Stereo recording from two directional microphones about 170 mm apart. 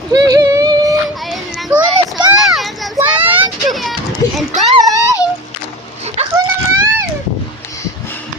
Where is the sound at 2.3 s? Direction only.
Centre (ahead or behind).